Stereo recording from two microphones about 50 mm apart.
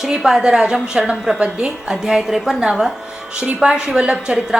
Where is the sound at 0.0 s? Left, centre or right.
Centre.